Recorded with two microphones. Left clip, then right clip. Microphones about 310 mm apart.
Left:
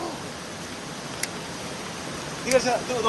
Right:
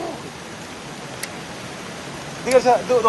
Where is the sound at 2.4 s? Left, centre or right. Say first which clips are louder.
Right 6 dB; centre.